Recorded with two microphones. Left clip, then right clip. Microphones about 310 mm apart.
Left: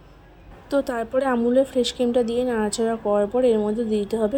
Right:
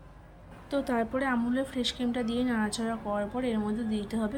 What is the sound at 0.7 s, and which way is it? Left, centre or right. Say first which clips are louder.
Speech: left 7 dB; centre.